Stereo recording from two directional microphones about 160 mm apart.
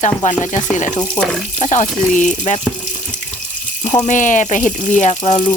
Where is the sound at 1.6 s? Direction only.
50° left (ahead or behind).